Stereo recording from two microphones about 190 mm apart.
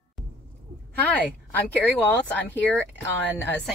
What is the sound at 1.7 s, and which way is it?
Speech, 5° left (ahead or behind).